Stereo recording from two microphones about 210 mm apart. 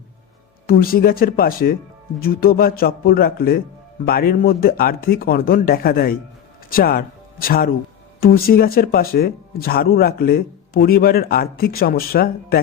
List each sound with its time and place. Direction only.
0.7 s speech: 45° left (ahead or behind)